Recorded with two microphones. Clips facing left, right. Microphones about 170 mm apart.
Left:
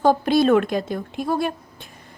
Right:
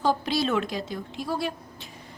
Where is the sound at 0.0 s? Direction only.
50° left (ahead or behind).